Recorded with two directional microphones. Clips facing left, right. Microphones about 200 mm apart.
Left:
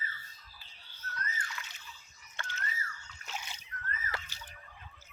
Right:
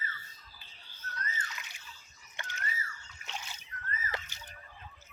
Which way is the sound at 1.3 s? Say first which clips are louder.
Even; 20° right (ahead or behind).